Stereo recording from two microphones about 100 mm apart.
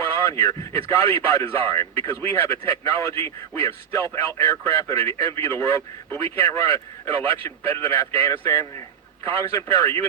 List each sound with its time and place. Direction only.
0.1 s a man's voice: 30° left (ahead or behind)